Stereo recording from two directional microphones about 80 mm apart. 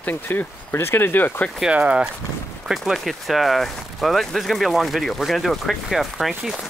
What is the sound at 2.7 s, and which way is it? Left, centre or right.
Speech, centre.